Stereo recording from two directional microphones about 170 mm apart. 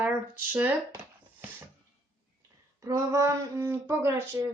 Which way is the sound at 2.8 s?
20° right (ahead or behind).